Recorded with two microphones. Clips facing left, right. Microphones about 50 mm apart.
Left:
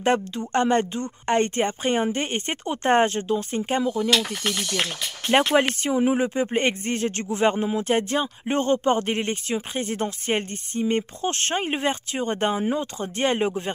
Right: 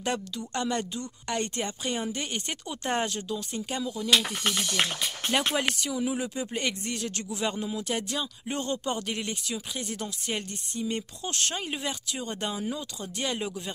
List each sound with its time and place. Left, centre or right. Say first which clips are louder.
0.0 s speech: left 9 dB; left
4.1 s speech: left 2 dB; centre
5.4 s speech: left 7 dB; left